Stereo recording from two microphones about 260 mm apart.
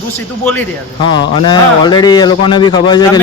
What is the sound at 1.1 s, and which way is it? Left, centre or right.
A man's voice, centre.